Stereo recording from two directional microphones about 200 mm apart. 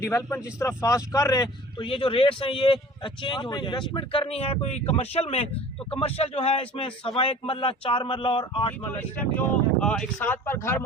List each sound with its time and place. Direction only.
0.0 s speech: 15° left (ahead or behind)
8.9 s speech: 10° left (ahead or behind)